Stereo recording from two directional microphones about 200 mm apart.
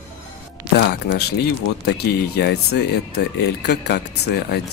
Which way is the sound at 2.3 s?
55° left (ahead or behind).